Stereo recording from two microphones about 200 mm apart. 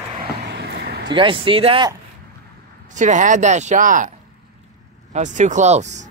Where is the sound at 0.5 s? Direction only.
55° right (ahead or behind).